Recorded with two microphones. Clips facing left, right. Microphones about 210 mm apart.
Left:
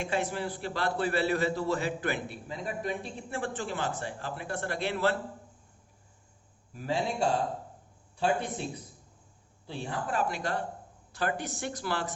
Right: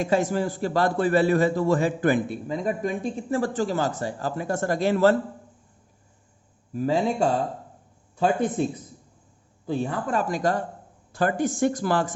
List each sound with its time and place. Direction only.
0.0 s a man's voice: 40° right (ahead or behind)
6.7 s a man's voice: 45° right (ahead or behind)
9.6 s a man's voice: 45° right (ahead or behind)